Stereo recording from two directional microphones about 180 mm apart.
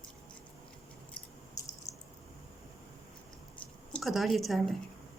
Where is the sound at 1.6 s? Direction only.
20° left (ahead or behind).